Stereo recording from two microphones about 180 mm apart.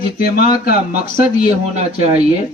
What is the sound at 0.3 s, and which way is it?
Speech, 55° left (ahead or behind).